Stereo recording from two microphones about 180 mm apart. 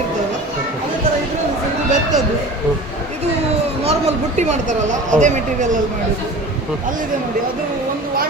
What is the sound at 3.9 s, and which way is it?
Speech, 40° right (ahead or behind).